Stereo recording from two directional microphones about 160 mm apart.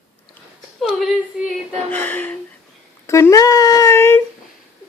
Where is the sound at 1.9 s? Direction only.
10° left (ahead or behind).